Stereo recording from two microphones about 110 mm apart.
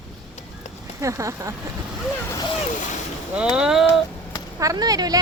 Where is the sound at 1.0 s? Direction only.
30° right (ahead or behind).